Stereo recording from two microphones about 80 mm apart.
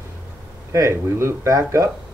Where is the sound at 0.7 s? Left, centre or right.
Right.